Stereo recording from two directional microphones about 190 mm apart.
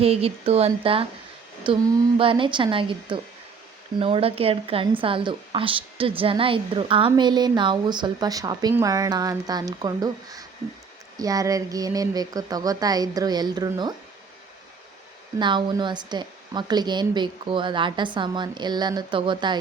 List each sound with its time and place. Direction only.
0.0 s a woman's voice: 30° right (ahead or behind)
15.4 s a woman's voice: 25° right (ahead or behind)